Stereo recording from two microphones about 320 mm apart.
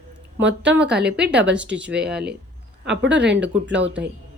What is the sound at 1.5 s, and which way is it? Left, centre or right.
Speech, centre.